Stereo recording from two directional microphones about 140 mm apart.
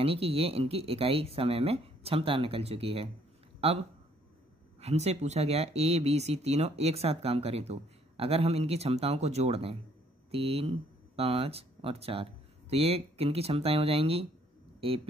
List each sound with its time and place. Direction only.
0.0 s speech: 45° right (ahead or behind)